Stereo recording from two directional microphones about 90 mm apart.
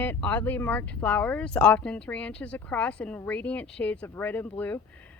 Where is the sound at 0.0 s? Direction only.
20° left (ahead or behind).